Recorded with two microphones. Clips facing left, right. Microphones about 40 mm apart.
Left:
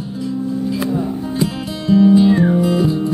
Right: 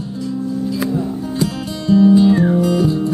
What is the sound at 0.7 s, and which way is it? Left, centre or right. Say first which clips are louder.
Music: even; centre.